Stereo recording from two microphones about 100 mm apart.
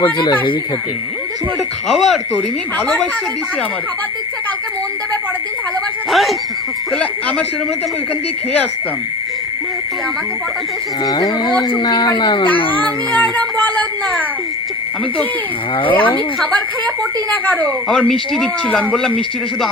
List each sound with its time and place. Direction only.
0.0 s speech: 50° left (ahead or behind)
1.9 s frog: centre (ahead or behind)
2.3 s speech: 15° left (ahead or behind)
6.1 s speech: centre (ahead or behind)
6.9 s speech: 10° left (ahead or behind)
11.0 s speech: 40° left (ahead or behind)
12.7 s child singing: 15° left (ahead or behind)
15.9 s speech: 15° left (ahead or behind)